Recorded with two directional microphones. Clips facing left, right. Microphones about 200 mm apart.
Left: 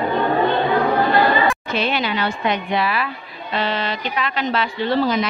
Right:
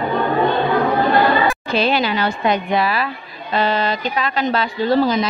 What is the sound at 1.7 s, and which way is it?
A woman's voice, 35° right (ahead or behind).